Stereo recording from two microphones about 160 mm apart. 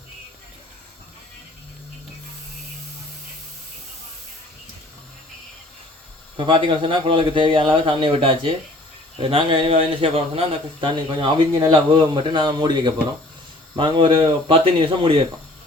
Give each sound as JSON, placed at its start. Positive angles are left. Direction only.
{"t": 6.3, "sound": "speech", "side_deg": -30}